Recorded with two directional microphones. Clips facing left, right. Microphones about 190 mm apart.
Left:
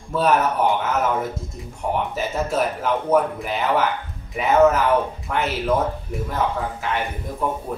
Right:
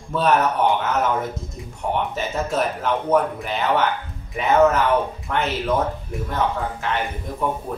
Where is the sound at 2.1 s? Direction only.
5° left (ahead or behind).